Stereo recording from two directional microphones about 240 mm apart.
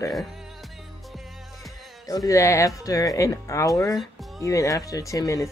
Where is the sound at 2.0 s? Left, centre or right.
Centre.